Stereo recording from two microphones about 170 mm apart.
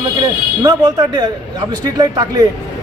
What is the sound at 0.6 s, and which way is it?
Speech, 25° right (ahead or behind).